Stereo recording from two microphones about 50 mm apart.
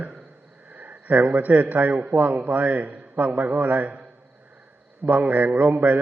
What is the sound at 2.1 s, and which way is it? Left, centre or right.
A man's voice, right.